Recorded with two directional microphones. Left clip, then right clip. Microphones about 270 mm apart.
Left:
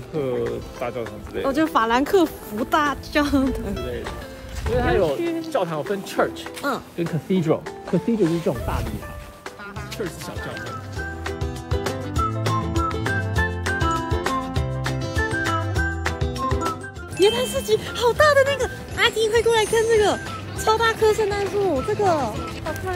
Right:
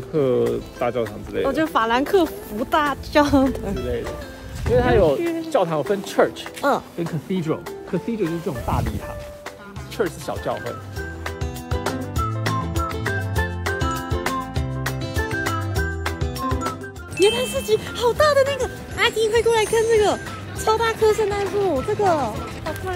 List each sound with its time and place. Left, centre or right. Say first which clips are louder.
0.2 s speech: right 5 dB; right
1.4 s a woman's voice: even; centre
4.7 s speech: right 4 dB; right
5.2 s speech: right 1 dB; centre
5.5 s speech: right 6 dB; right
6.6 s a woman's voice: right 5 dB; centre
7.2 s speech: left 5 dB; centre
9.9 s speech: right 7 dB; centre
11.7 s music: even; centre
17.2 s speech: even; centre